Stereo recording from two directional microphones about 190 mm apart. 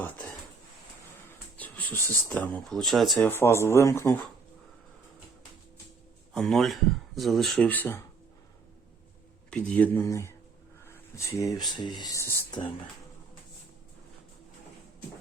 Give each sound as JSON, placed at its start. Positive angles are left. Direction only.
{"t": 1.5, "sound": "speech", "side_deg": 10}
{"t": 3.2, "sound": "speech", "side_deg": 15}
{"t": 6.3, "sound": "speech", "side_deg": 0}
{"t": 9.5, "sound": "speech", "side_deg": 5}
{"t": 10.8, "sound": "a sound", "side_deg": 15}
{"t": 11.8, "sound": "speech", "side_deg": 20}